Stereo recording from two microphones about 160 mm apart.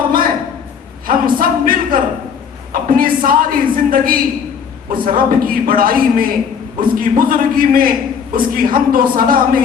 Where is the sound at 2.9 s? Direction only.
60° right (ahead or behind).